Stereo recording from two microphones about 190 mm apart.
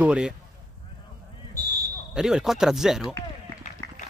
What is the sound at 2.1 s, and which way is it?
Speech, 5° right (ahead or behind).